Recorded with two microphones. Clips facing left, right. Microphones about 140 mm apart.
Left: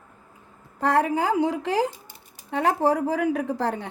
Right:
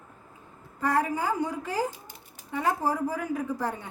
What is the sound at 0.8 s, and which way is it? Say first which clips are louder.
A woman's voice: left 5 dB; 75° left (ahead or behind).